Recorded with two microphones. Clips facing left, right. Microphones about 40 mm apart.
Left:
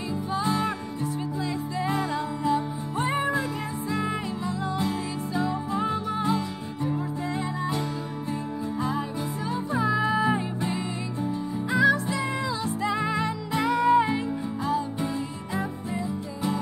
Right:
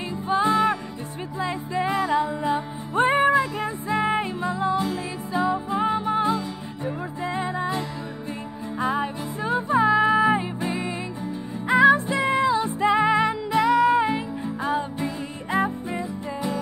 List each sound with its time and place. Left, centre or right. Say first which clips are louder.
0.3 s music: right 7 dB; right
1.9 s music: right 6 dB; centre
3.0 s music: right 8 dB; right
8.7 s music: right 6 dB; right; by 10.9 s centre
11.7 s music: right 6 dB; right
13.5 s music: right 2 dB; centre
14.6 s music: right 3 dB; right